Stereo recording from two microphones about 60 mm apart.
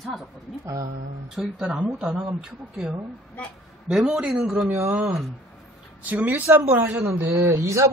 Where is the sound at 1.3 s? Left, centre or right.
Centre.